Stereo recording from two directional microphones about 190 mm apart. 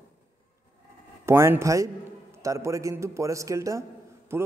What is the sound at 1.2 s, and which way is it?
A man's voice, 15° right (ahead or behind).